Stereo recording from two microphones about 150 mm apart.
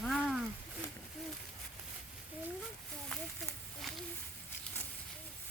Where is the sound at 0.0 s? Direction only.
Centre (ahead or behind).